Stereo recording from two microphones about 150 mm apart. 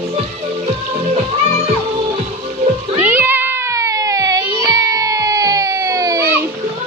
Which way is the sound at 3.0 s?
15° right (ahead or behind).